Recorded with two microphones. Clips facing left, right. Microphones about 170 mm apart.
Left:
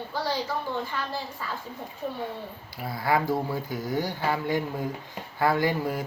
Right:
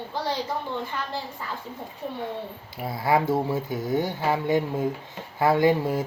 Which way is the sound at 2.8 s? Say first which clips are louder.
Right 3 dB; 25° right (ahead or behind).